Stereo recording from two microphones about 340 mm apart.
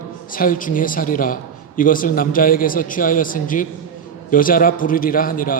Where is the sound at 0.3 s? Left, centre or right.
Left.